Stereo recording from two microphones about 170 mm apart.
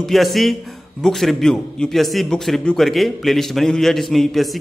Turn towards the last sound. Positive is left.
turn(degrees=0)  # may be behind; listen again after turning